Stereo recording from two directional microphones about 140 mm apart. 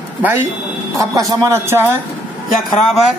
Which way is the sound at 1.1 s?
25° right (ahead or behind).